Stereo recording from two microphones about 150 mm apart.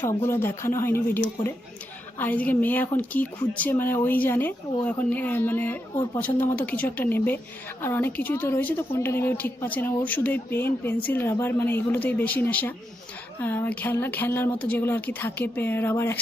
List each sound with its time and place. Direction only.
0.0 s speech: 15° left (ahead or behind)